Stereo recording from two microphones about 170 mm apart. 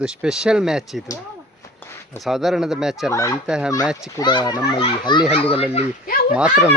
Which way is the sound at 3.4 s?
5° right (ahead or behind).